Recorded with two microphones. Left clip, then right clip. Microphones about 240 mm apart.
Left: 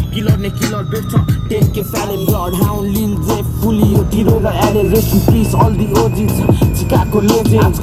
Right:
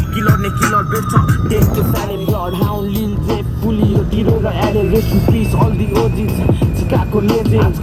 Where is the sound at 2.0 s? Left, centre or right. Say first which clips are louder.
Left 2 dB; left.